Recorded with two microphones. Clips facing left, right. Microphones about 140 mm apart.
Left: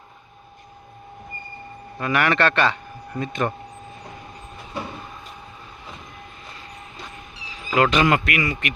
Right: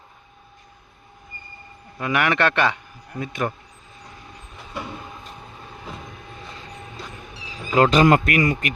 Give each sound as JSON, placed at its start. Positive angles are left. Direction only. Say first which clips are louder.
{"t": 2.0, "sound": "a man's voice", "louder": "even", "side_deg": -15}
{"t": 7.8, "sound": "a man's voice", "louder": "right 3 dB", "side_deg": -35}